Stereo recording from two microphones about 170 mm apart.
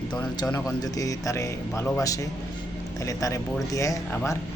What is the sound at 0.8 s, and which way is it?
A man's voice, 20° left (ahead or behind).